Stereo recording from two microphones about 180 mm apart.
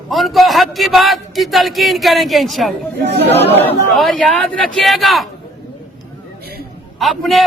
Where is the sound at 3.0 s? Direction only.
70° right (ahead or behind).